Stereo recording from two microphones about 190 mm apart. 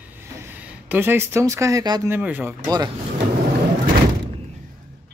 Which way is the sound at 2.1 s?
10° right (ahead or behind).